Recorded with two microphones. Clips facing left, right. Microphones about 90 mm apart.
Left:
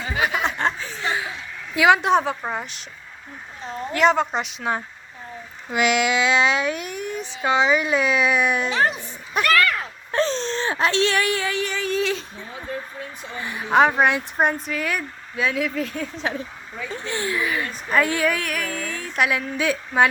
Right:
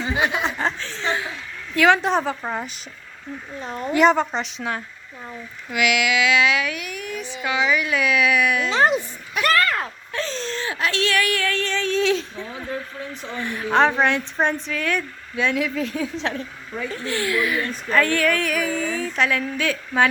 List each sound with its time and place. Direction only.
0.3 s chuckle: 5° left (ahead or behind)
1.7 s speech: 10° left (ahead or behind)
3.9 s speech: centre (ahead or behind)
5.7 s a sound: 30° left (ahead or behind)
9.4 s speech: 35° right (ahead or behind)
10.1 s speech: 35° left (ahead or behind); by 12.2 s 5° left (ahead or behind)
13.4 s speech: 5° left (ahead or behind)
16.9 s a sound: 25° left (ahead or behind)
18.4 s a woman's voice: centre (ahead or behind); by 20.1 s 15° left (ahead or behind)